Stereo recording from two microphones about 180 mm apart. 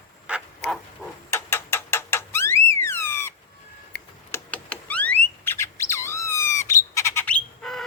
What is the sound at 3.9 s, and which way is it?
Tick-tock, 65° left (ahead or behind).